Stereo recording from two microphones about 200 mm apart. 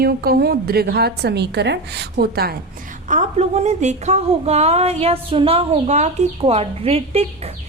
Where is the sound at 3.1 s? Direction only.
35° right (ahead or behind).